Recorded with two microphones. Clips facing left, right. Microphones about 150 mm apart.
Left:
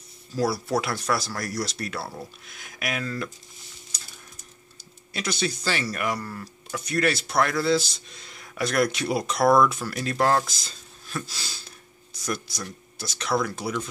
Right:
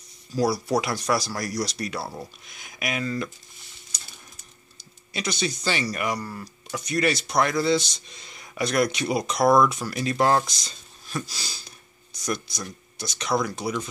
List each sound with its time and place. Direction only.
0.4 s speech: centre (ahead or behind)
5.1 s speech: 5° left (ahead or behind)
11.2 s a sound: centre (ahead or behind)
12.2 s speech: 5° left (ahead or behind)